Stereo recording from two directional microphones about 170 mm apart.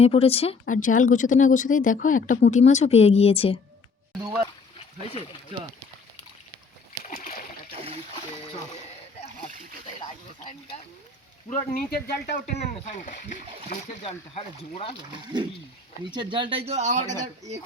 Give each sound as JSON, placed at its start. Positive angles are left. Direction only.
{"t": 0.0, "sound": "speech", "side_deg": 35}
{"t": 0.7, "sound": "speech", "side_deg": 50}
{"t": 4.8, "sound": "speech", "side_deg": 35}
{"t": 7.1, "sound": "splash", "side_deg": 60}
{"t": 7.7, "sound": "a sound", "side_deg": -35}
{"t": 11.4, "sound": "speech", "side_deg": 45}
{"t": 11.9, "sound": "speech", "side_deg": 65}
{"t": 12.5, "sound": "speech", "side_deg": 45}
{"t": 14.0, "sound": "speech", "side_deg": 35}
{"t": 15.3, "sound": "speech", "side_deg": -25}